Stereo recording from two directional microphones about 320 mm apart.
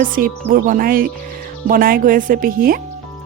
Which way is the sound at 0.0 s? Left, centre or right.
Right.